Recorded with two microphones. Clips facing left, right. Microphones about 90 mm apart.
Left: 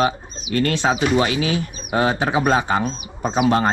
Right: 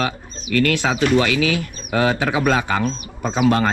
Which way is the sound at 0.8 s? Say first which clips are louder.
Left 2 dB; 40° left (ahead or behind).